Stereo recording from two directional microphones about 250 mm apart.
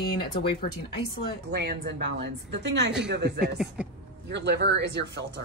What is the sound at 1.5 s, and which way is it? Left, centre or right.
Speech, right.